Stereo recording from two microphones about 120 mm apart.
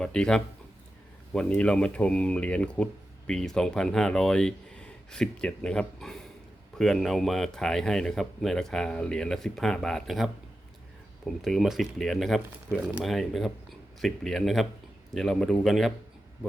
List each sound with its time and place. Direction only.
0.0 s speech: 5° left (ahead or behind)
11.3 s speech: centre (ahead or behind)